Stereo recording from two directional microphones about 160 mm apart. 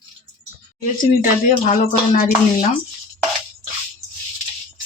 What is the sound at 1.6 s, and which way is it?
Speech, 50° left (ahead or behind).